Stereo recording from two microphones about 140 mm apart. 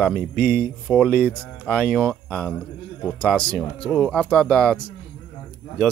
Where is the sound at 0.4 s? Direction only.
10° left (ahead or behind).